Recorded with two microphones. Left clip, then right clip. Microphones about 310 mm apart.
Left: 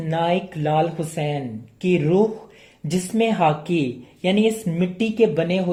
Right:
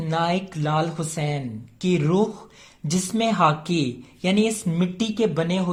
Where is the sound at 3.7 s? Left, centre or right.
Right.